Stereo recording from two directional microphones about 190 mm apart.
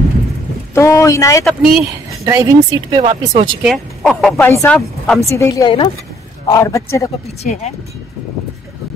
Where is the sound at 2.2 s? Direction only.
15° right (ahead or behind).